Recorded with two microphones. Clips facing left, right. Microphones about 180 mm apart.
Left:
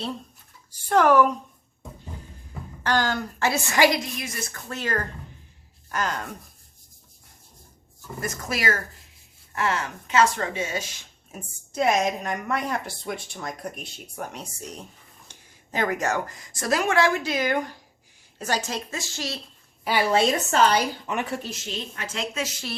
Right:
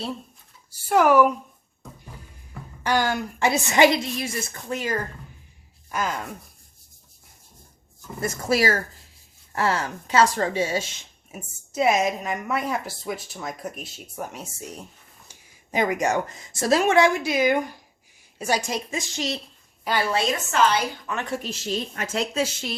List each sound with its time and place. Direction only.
0.8 s speech: 10° right (ahead or behind)
2.8 s speech: 10° right (ahead or behind)
4.7 s speech: 10° right (ahead or behind)
8.2 s a woman's voice: 30° right (ahead or behind)
11.3 s a woman's voice: 5° right (ahead or behind)
19.8 s a woman's voice: 10° left (ahead or behind)
20.1 s a woman's voice: 25° left (ahead or behind)
21.5 s a woman's voice: 40° right (ahead or behind)